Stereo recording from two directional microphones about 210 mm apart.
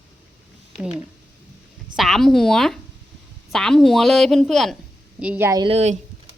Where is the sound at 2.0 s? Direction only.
Centre (ahead or behind); by 6.0 s 30° right (ahead or behind).